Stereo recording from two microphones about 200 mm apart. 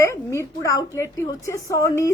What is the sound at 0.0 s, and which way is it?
A woman's voice, 15° left (ahead or behind).